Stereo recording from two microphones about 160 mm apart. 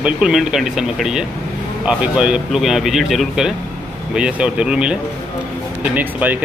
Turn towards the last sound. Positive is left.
turn(degrees=-10)  # may be behind; listen again after turning